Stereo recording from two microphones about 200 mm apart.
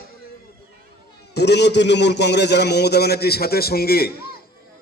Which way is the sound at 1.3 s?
55° left (ahead or behind).